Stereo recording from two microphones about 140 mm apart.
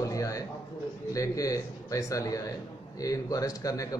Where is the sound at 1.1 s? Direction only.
25° left (ahead or behind).